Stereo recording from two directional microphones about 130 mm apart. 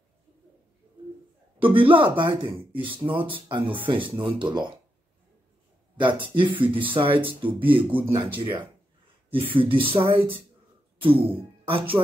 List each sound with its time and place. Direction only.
1.6 s speech: 40° right (ahead or behind)
5.9 s speech: 40° right (ahead or behind)
10.0 s speech: 15° right (ahead or behind)
11.1 s speech: 45° right (ahead or behind)